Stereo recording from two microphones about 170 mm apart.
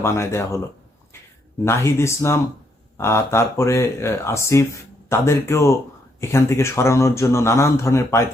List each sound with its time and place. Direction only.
0.0 s speech: 15° left (ahead or behind)
1.6 s speech: 15° left (ahead or behind)